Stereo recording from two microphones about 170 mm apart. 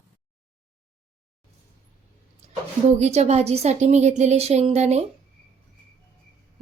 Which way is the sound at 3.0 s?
40° right (ahead or behind).